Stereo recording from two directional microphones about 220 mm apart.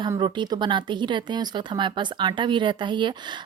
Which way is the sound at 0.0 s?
20° right (ahead or behind).